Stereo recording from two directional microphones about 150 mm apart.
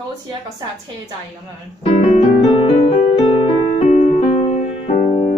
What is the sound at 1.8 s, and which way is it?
Music, 45° left (ahead or behind).